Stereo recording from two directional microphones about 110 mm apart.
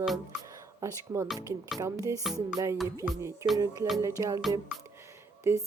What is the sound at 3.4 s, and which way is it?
Music, 35° right (ahead or behind).